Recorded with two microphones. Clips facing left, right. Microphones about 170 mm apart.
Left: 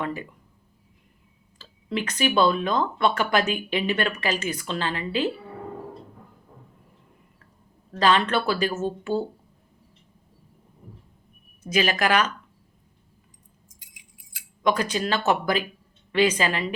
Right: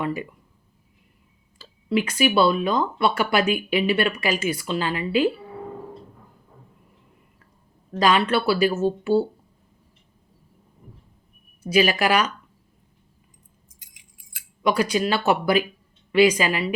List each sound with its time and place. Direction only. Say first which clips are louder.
0.0 s speech: right 3 dB; 10° right (ahead or behind)
1.5 s speech: right 6 dB; 10° right (ahead or behind)
7.9 s speech: right 2 dB; 10° right (ahead or behind)
11.6 s speech: right 4 dB; 10° right (ahead or behind)
13.7 s keys jangling: left 2 dB; 45° right (ahead or behind)
14.6 s speech: right 3 dB; 10° right (ahead or behind)